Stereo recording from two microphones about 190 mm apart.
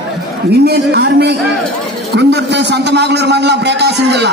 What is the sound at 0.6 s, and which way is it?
A man's voice, 60° right (ahead or behind).